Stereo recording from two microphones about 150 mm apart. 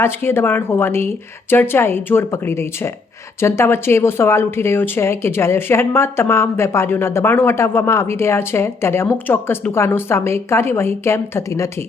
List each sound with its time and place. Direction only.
0.0 s speech: 15° left (ahead or behind)